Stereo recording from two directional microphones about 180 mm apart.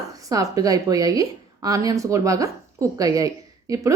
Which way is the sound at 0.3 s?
20° right (ahead or behind).